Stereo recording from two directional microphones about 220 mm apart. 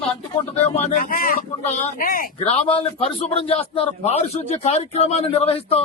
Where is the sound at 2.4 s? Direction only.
25° left (ahead or behind).